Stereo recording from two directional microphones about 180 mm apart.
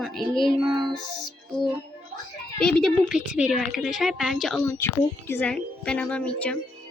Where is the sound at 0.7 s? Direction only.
25° right (ahead or behind).